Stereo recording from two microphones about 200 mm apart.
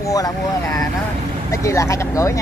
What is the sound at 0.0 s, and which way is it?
Speech, 15° left (ahead or behind).